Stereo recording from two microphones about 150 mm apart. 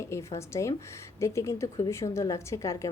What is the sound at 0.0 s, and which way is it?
A woman's voice, 20° left (ahead or behind).